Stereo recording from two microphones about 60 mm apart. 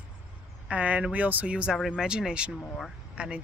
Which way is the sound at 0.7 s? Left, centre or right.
Right.